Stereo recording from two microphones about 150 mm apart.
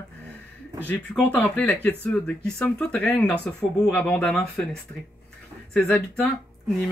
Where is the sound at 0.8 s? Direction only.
10° left (ahead or behind).